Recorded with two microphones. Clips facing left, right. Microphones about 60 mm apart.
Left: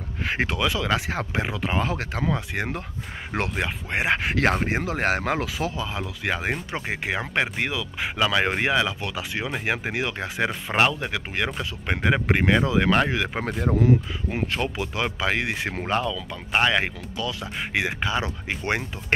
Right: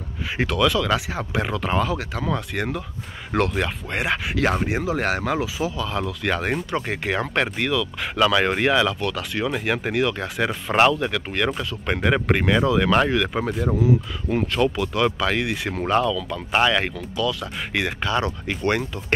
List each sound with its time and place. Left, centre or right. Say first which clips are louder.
0.4 s speech: right 6 dB; left
1.4 s speech: right 3 dB; centre
1.8 s speech: right 3 dB; left
2.2 s speech: right 1 dB; centre
4.1 s speech: even; left
5.4 s speech: right 2 dB; left
5.8 s speech: right 4 dB; centre; by 15.8 s left
15.8 s speech: right 6 dB; centre
16.1 s speech: right 4 dB; centre
17.2 s speech: right 5 dB; left
17.7 s speech: right 2 dB; centre